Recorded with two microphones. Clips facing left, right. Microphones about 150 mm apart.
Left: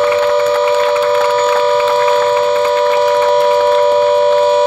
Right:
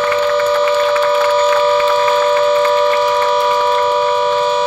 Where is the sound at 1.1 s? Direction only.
60° left (ahead or behind).